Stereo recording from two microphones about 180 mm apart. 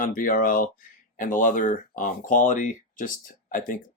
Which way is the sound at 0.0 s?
50° left (ahead or behind).